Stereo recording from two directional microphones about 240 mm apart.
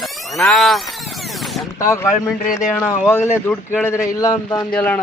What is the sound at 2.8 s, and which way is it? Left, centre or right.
A man's voice, centre.